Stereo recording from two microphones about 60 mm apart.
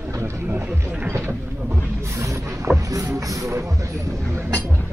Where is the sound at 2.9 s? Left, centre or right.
Right.